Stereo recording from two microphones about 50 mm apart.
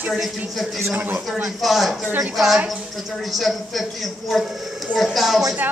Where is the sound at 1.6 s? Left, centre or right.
Centre.